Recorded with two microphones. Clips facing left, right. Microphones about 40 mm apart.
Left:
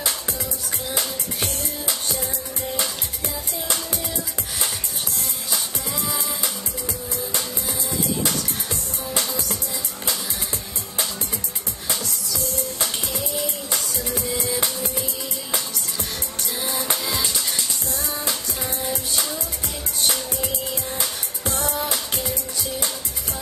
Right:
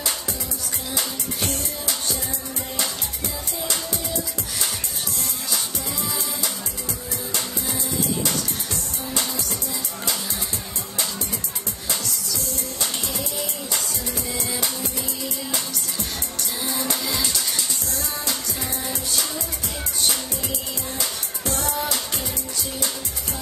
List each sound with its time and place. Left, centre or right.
13.7 s music: left
21.5 s music: left